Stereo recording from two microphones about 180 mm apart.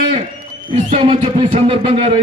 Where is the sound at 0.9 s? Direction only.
30° right (ahead or behind).